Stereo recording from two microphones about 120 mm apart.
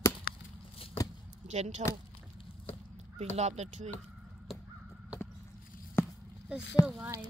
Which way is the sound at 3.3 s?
70° right (ahead or behind).